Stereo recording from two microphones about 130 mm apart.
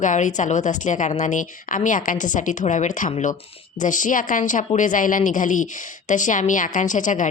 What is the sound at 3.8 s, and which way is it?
A woman's voice, 80° left.